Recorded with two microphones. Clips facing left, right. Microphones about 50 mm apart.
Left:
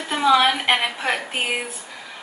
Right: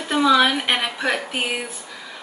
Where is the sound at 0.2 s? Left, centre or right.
Centre.